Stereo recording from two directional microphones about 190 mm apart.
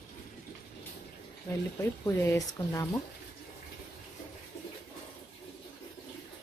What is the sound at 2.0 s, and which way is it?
Speech, 15° left (ahead or behind).